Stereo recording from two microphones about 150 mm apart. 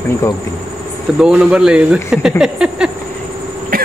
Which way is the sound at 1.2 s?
5° right (ahead or behind).